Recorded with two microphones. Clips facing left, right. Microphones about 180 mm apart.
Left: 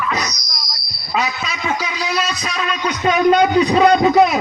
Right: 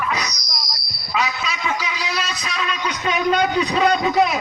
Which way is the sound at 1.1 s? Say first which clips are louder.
Left 2 dB; 50° left (ahead or behind).